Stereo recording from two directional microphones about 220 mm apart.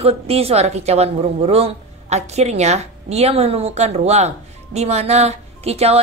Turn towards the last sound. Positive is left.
turn(degrees=-30)  # may be behind; listen again after turning